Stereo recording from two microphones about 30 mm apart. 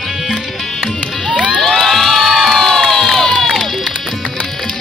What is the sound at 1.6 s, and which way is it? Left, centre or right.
Crowd, centre.